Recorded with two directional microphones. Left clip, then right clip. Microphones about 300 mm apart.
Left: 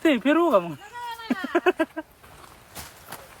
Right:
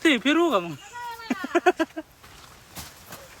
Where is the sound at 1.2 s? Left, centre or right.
Centre.